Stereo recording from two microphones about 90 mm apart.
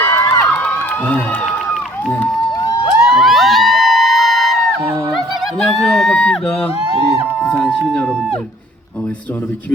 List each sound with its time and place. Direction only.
0.0 s crowd: 25° left (ahead or behind)
3.1 s music: centre (ahead or behind)
5.5 s a sound: 5° left (ahead or behind)